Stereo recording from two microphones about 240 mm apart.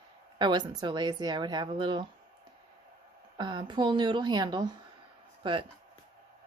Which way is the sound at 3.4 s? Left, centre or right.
Centre.